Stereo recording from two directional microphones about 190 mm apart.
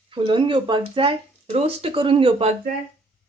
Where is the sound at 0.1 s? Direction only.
25° right (ahead or behind).